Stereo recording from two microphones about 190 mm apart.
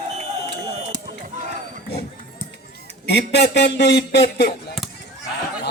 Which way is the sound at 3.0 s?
60° left (ahead or behind).